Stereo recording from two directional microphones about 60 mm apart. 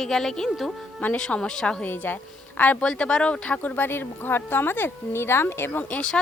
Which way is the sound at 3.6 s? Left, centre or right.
Left.